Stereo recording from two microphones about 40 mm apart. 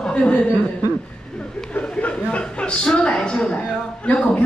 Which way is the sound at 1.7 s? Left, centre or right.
Left.